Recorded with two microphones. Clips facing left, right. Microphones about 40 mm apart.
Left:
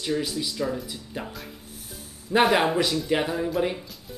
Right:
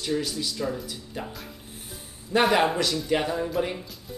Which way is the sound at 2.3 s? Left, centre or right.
Centre.